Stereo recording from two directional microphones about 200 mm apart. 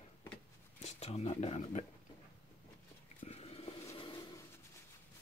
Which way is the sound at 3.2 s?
30° left (ahead or behind).